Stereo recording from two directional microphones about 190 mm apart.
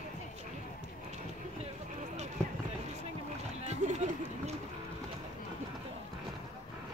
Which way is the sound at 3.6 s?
35° right (ahead or behind).